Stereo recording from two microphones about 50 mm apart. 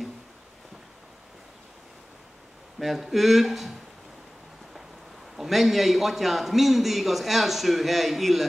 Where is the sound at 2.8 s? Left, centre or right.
Centre.